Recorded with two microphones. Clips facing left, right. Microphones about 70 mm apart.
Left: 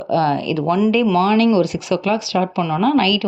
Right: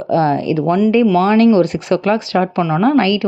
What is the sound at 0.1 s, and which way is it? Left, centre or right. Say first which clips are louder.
Speech: right 3 dB; right.